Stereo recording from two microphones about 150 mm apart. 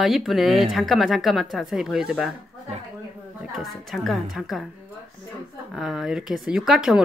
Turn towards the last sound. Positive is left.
turn(degrees=-5)  # may be behind; listen again after turning